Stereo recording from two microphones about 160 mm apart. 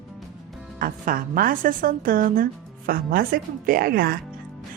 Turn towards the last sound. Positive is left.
turn(degrees=-65)  # may be behind; listen again after turning